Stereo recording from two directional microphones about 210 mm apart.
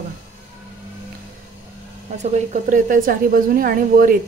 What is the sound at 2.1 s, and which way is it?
A woman's voice, 35° right (ahead or behind).